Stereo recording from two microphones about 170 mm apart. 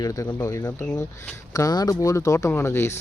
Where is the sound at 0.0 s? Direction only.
20° left (ahead or behind).